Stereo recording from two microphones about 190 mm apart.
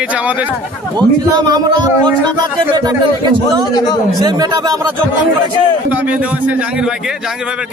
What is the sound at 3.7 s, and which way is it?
Speech, 20° left (ahead or behind).